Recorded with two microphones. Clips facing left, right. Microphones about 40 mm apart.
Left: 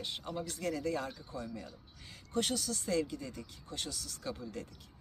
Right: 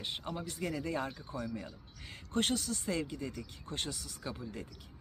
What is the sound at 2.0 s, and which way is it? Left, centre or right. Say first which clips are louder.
Speech: right 2 dB; right.